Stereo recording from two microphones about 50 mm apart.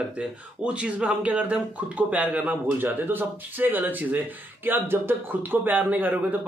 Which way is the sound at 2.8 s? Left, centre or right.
Right.